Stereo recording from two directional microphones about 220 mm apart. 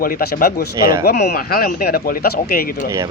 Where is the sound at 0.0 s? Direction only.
45° left (ahead or behind).